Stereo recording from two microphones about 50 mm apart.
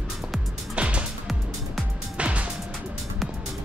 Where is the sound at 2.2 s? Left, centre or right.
Right.